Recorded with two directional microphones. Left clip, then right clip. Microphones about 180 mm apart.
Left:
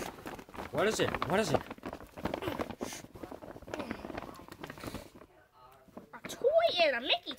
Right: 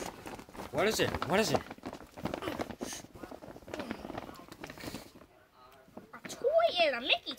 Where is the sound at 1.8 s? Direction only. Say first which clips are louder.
Left 1 dB; 10° left (ahead or behind).